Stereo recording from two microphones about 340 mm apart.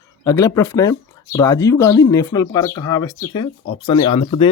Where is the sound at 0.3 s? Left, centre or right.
Centre.